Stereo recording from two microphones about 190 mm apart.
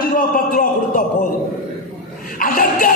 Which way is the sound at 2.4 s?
50° left (ahead or behind).